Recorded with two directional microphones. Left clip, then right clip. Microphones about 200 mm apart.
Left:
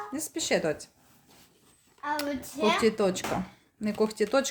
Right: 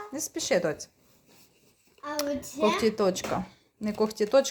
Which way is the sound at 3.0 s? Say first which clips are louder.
Right 1 dB; centre (ahead or behind).